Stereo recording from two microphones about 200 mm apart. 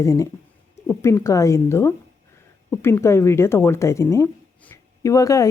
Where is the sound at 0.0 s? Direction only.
15° left (ahead or behind).